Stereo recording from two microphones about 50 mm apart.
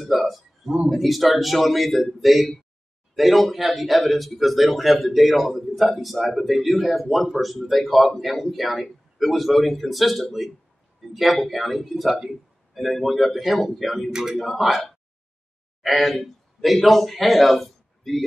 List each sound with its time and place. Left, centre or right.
0.1 s speech: centre